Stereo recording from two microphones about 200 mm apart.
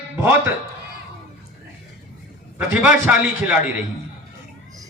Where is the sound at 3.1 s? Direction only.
5° right (ahead or behind).